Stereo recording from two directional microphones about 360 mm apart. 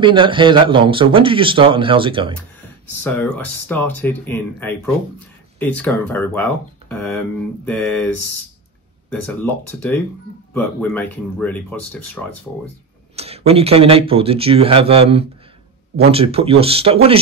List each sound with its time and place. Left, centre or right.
0.0 s speech: centre
3.0 s speech: centre
9.1 s speech: centre
13.1 s speech: centre